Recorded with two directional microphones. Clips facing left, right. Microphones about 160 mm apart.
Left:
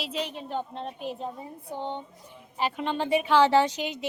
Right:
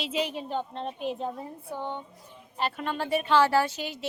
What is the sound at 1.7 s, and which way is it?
Speech, 25° left (ahead or behind).